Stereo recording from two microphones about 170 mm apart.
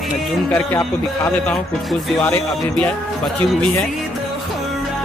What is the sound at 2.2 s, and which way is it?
Speech, 10° left (ahead or behind).